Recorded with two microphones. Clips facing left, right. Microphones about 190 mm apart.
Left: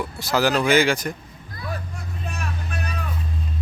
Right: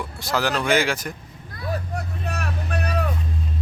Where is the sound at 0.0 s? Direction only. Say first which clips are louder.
Left 3 dB; 5° left (ahead or behind).